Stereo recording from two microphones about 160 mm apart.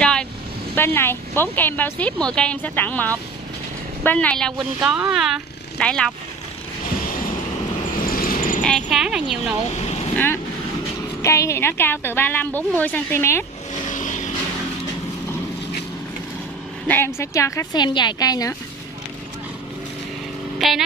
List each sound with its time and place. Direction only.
0.0 s vehicle: 5° left (ahead or behind)
0.7 s speech: 15° left (ahead or behind)
4.8 s speech: 5° right (ahead or behind)
8.0 s vehicle: 60° left (ahead or behind)
8.6 s speech: centre (ahead or behind)
10.1 s speech: 15° left (ahead or behind)
13.8 s vehicle: 50° left (ahead or behind)
16.8 s a woman's voice: 15° left (ahead or behind)
20.5 s vehicle: centre (ahead or behind)